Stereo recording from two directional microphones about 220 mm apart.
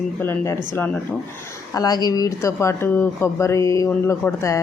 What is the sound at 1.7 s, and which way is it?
Speech, 15° left (ahead or behind).